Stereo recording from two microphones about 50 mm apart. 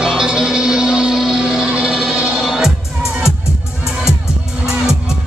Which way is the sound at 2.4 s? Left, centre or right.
Centre.